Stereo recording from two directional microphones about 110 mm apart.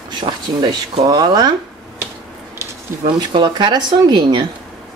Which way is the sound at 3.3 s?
45° right (ahead or behind).